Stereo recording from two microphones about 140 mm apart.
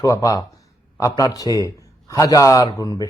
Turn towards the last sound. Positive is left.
turn(degrees=25)  # may be behind; listen again after turning